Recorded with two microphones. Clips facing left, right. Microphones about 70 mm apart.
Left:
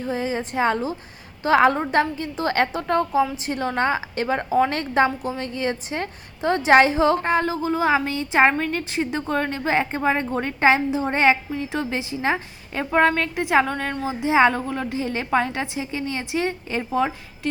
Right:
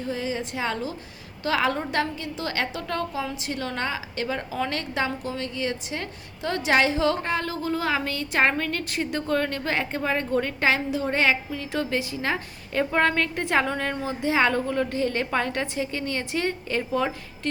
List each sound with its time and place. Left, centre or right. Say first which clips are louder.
0.0 s a woman's voice: left 4 dB; left
7.5 s a woman's voice: left 5 dB; centre
13.7 s a woman's voice: left 1 dB; centre
14.0 s a woman's voice: left 6 dB; centre